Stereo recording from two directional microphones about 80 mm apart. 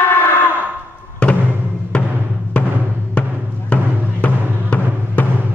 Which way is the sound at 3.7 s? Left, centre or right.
Centre.